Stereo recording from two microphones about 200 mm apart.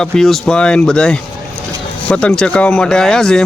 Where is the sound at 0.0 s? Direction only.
Centre (ahead or behind).